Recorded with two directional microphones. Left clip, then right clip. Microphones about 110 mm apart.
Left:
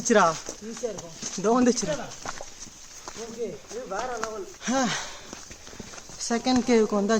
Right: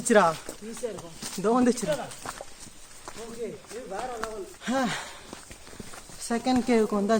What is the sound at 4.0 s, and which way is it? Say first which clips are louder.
Speech: left 2 dB; 25° left (ahead or behind).